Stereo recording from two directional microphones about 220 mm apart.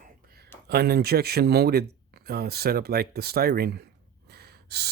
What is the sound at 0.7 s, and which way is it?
Speech, 45° right (ahead or behind).